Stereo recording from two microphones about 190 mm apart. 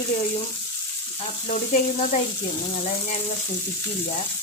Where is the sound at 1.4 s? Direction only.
40° left (ahead or behind).